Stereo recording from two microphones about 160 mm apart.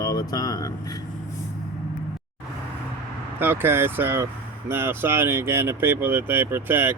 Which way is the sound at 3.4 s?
15° right (ahead or behind).